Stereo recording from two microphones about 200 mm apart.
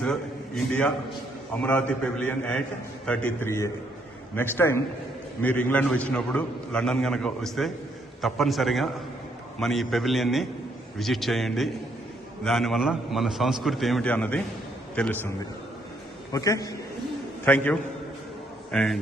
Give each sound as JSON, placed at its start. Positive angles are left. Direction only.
{"t": 0.0, "sound": "a sound", "side_deg": 5}
{"t": 1.6, "sound": "a man's voice", "side_deg": 5}
{"t": 16.3, "sound": "a man's voice", "side_deg": 15}